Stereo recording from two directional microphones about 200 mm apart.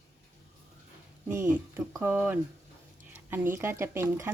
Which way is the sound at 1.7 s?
10° right (ahead or behind).